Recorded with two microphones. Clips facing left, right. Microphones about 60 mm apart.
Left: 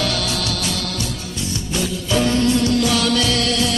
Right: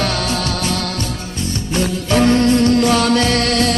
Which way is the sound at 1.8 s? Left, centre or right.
Right.